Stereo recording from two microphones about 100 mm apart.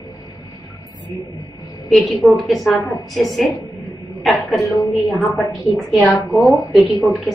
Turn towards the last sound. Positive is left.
turn(degrees=0)  # may be behind; listen again after turning